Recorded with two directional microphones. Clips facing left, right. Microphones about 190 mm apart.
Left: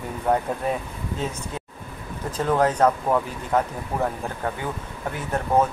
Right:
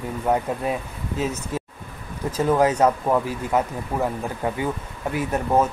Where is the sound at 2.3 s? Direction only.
10° right (ahead or behind).